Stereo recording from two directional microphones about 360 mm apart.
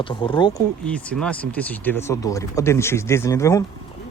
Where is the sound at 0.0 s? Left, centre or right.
Centre.